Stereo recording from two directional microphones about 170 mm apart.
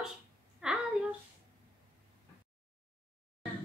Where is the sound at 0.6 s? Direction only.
5° right (ahead or behind).